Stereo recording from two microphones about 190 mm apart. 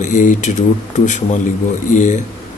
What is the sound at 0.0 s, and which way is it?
Speech, 40° left (ahead or behind).